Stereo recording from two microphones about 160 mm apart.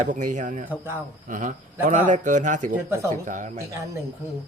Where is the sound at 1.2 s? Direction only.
55° right (ahead or behind).